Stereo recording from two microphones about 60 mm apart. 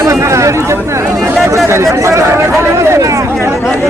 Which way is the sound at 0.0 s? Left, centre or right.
Right.